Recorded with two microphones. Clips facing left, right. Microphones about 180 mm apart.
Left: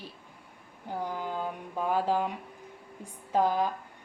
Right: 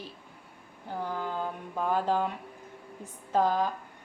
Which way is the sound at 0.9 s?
15° left (ahead or behind).